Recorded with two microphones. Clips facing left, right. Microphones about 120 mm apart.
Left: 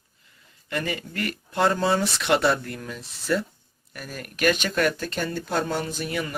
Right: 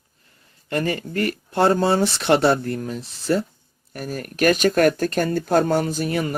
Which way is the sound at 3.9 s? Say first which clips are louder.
Right 8 dB; 45° right (ahead or behind).